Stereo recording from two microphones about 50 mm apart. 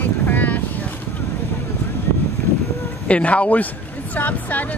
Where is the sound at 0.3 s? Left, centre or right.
Left.